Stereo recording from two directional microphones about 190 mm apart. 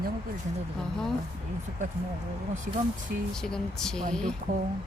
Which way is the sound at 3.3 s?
5° left (ahead or behind).